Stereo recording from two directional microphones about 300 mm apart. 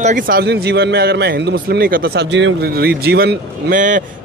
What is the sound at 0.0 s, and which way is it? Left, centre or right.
A man's voice, right.